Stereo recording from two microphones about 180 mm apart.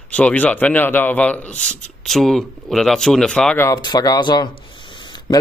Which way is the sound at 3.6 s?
20° left (ahead or behind).